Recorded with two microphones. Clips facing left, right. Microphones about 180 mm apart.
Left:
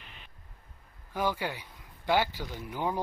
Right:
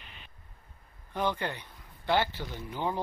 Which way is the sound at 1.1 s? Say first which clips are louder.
Even; 5° left (ahead or behind).